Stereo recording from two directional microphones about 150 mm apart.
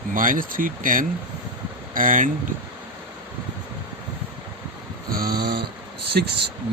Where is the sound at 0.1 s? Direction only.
65° right (ahead or behind).